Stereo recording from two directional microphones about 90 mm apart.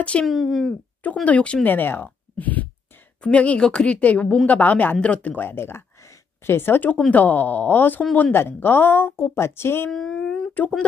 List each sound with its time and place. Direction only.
0.0 s a woman's voice: 15° left (ahead or behind)
0.3 s speech: centre (ahead or behind)
1.2 s a woman's voice: 15° left (ahead or behind)
9.8 s speech: 5° left (ahead or behind)